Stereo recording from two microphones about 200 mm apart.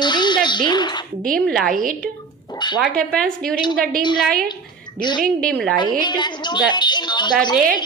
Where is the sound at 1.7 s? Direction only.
45° right (ahead or behind).